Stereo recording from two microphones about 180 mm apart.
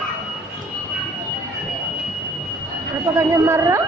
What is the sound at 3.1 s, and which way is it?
Speech, 15° right (ahead or behind).